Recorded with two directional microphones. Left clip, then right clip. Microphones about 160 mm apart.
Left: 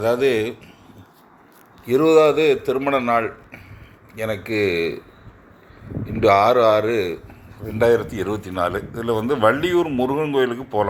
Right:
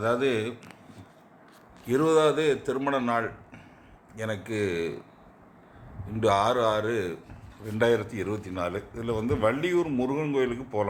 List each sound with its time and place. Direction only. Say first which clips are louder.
0.0 s speech: left 7 dB; 20° left (ahead or behind)
1.9 s speech: left 8 dB; 15° left (ahead or behind)
6.2 s speech: left 9 dB; 15° left (ahead or behind)